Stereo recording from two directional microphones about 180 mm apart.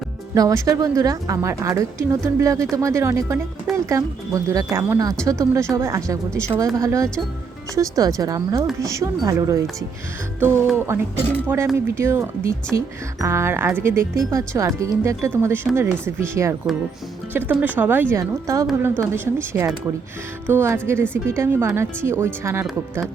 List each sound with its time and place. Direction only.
0.3 s speech: 20° right (ahead or behind)
3.7 s speech: centre (ahead or behind)
4.4 s speech: 15° right (ahead or behind)
10.8 s speech: 15° right (ahead or behind)